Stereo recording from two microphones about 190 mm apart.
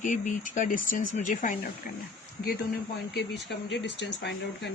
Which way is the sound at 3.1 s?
60° left (ahead or behind).